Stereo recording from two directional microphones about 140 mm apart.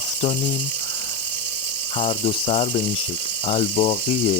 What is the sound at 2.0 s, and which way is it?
Speech, 40° left (ahead or behind).